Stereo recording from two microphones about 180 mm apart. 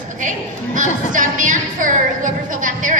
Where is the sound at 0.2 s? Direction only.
45° right (ahead or behind).